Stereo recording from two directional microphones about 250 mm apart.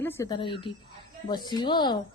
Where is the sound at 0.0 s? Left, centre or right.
Centre.